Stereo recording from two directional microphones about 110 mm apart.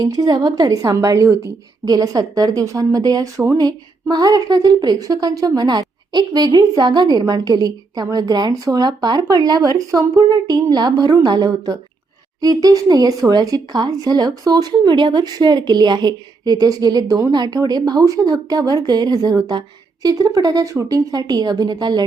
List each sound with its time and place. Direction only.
0.0 s a woman's voice: 35° right (ahead or behind)